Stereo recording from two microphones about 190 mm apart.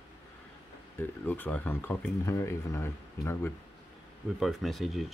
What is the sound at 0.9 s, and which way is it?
Speech, 10° left (ahead or behind).